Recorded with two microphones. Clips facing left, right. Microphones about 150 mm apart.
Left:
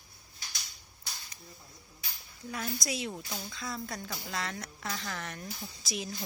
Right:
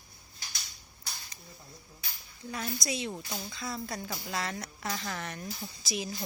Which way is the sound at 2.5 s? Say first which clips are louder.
Right 1 dB; centre (ahead or behind).